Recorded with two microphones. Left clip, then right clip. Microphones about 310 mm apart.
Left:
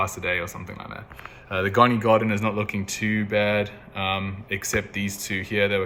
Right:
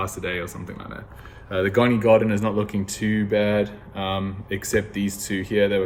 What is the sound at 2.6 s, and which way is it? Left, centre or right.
Speech, left.